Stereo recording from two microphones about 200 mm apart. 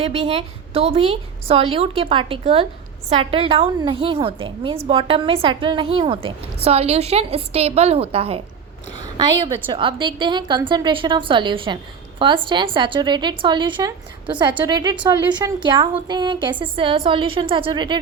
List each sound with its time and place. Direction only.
0.0 s a woman's voice: 30° right (ahead or behind)
9.6 s a woman's voice: 25° right (ahead or behind)